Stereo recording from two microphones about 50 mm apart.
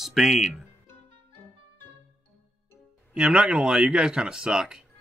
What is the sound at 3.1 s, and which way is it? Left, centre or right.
Speech, centre.